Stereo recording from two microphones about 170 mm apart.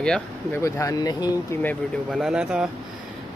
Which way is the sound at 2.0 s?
5° right (ahead or behind).